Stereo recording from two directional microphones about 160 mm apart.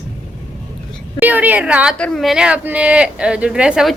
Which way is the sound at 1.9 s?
5° left (ahead or behind).